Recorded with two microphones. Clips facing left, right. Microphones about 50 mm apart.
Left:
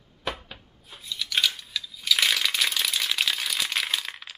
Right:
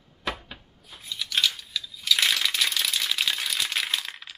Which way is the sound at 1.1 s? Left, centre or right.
Centre.